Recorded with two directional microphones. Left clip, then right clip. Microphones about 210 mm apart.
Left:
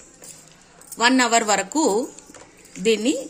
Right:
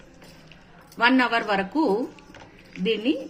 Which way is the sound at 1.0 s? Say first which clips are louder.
Left 3 dB; 60° left (ahead or behind).